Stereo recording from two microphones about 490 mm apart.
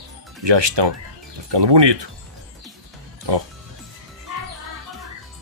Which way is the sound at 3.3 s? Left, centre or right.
Right.